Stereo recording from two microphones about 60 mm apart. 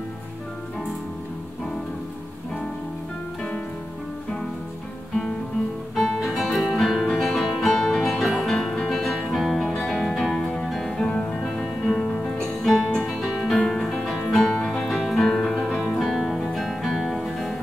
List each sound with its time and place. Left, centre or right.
6.2 s music: centre
9.8 s music: centre
11.0 s music: centre
12.6 s music: centre
13.5 s music: centre
14.9 s music: centre